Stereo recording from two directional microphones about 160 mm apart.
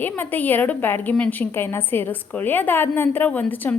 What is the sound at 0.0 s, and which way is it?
A woman's voice, 10° left (ahead or behind).